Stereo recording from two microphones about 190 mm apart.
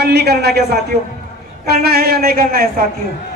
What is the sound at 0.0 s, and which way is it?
Speech, 55° right (ahead or behind).